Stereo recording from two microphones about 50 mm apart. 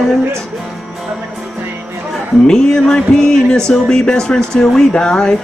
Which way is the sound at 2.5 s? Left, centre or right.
Centre.